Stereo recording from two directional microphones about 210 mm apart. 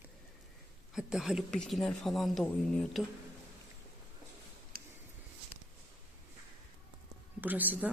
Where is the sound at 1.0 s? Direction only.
Centre (ahead or behind).